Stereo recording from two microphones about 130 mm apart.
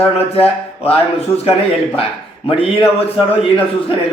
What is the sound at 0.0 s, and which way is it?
Speech, 50° left (ahead or behind).